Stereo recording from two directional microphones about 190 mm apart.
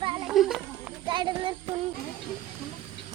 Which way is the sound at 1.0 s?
25° right (ahead or behind).